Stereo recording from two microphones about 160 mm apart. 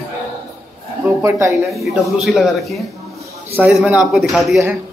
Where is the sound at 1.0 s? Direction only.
15° right (ahead or behind).